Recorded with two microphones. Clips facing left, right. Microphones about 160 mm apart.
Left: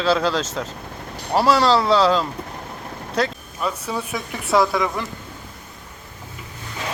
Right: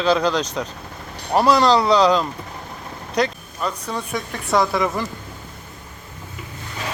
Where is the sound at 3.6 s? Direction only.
5° left (ahead or behind).